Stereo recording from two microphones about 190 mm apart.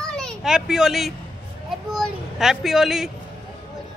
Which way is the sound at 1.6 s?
Centre (ahead or behind).